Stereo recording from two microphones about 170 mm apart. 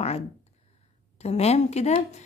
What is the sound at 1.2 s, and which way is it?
A woman's voice, 40° left (ahead or behind).